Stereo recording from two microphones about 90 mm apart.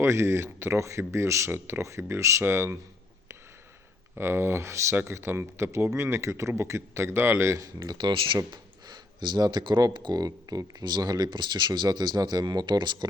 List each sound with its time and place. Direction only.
0.0 s speech: 30° right (ahead or behind)
4.1 s speech: 30° right (ahead or behind)
7.9 s speech: 65° right (ahead or behind)
8.4 s speech: 55° right (ahead or behind)